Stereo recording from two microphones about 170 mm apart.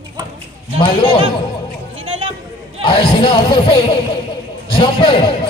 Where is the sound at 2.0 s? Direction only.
35° right (ahead or behind).